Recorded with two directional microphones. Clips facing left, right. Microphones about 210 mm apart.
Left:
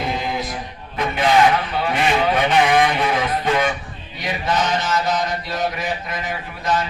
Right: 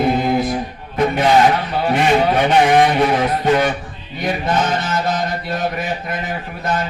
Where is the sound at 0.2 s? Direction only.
55° right (ahead or behind).